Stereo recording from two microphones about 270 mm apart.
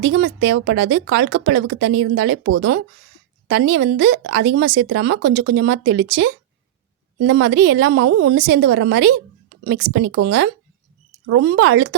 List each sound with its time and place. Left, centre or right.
0.0 s speech: right